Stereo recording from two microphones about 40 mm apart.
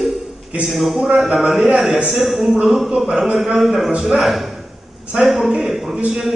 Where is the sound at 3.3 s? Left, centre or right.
Centre.